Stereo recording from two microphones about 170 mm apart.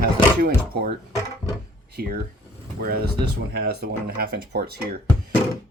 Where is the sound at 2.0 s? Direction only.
60° right (ahead or behind).